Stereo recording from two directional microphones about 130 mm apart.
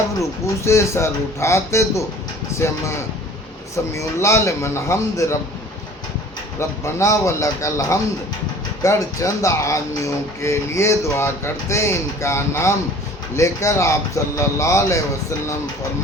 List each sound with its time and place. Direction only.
0.2 s speech: 20° left (ahead or behind)
6.6 s speech: 20° left (ahead or behind)